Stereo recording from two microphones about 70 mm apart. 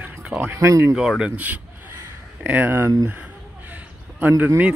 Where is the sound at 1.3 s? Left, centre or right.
Right.